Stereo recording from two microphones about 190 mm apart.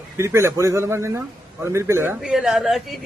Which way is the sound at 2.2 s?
Centre (ahead or behind).